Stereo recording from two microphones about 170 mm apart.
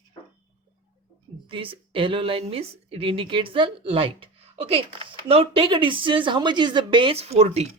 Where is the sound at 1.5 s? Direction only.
30° right (ahead or behind).